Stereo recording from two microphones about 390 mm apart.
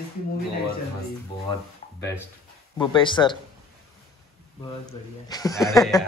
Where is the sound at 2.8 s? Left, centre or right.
Centre.